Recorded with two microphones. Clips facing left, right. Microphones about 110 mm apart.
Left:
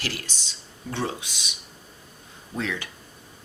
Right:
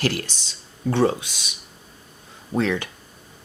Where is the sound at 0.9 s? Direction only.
65° right (ahead or behind).